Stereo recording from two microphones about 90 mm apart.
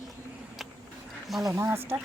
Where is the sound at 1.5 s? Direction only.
30° right (ahead or behind).